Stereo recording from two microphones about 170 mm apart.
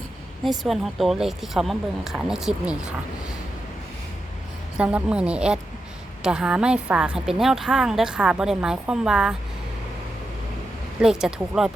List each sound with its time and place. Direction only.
0.4 s a woman's voice: centre (ahead or behind)
4.8 s a woman's voice: 5° right (ahead or behind)
11.0 s a woman's voice: 5° right (ahead or behind)